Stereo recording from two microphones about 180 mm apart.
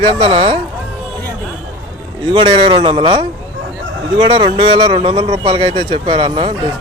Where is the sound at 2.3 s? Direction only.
30° right (ahead or behind).